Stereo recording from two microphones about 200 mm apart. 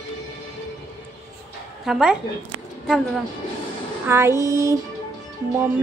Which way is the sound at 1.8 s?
Centre (ahead or behind).